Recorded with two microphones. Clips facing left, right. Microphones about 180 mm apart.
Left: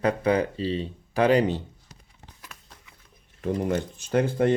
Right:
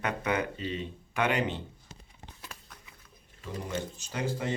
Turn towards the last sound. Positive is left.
turn(degrees=55)  # may be behind; listen again after turning